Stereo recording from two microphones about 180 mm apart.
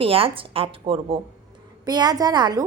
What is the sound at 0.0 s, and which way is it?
A woman's voice, 30° right (ahead or behind).